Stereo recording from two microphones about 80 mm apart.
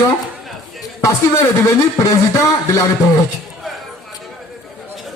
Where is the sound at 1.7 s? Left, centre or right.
Left.